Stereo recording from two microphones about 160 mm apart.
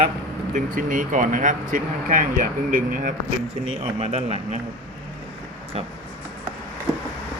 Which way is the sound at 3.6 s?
40° right (ahead or behind).